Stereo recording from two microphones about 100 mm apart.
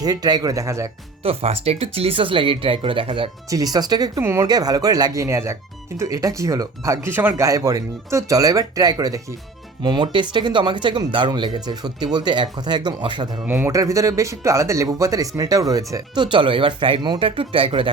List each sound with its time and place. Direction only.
0.0 s speech: 40° right (ahead or behind)
1.2 s speech: 80° right; by 3.2 s 60° right (ahead or behind)
3.5 s speech: 40° right (ahead or behind)
4.2 s speech: 30° right (ahead or behind)
4.4 s speech: 40° right (ahead or behind); by 7.3 s 20° right (ahead or behind)
7.3 s speech: 35° right (ahead or behind)
9.8 s speech: 50° right (ahead or behind)
13.5 s speech: 20° right (ahead or behind)
13.7 s speech: 35° right (ahead or behind); by 17.9 s 60° right (ahead or behind)